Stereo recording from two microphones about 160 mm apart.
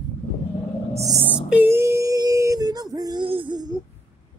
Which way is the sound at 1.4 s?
10° right (ahead or behind).